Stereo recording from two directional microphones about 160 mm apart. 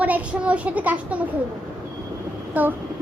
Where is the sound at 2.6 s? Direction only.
10° right (ahead or behind).